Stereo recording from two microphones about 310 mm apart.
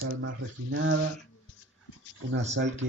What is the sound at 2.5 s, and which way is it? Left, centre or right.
Speech, right.